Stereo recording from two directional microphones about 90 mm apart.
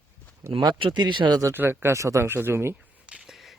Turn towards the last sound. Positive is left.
turn(degrees=-5)  # may be behind; listen again after turning